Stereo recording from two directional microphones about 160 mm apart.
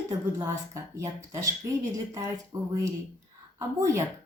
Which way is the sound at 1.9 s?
20° right (ahead or behind).